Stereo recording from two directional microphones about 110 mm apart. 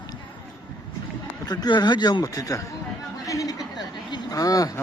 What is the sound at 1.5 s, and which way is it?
Speech, 40° left (ahead or behind).